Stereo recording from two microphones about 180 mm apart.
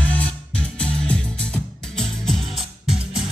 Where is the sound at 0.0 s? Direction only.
10° left (ahead or behind).